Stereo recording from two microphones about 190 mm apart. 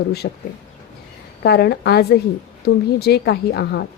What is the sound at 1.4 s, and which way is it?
A woman's voice, 60° left (ahead or behind).